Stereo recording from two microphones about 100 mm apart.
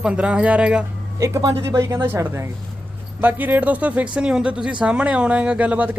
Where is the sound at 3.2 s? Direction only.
15° right (ahead or behind).